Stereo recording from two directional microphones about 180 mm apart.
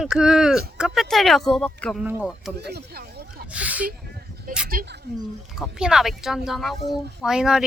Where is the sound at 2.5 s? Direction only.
60° right (ahead or behind).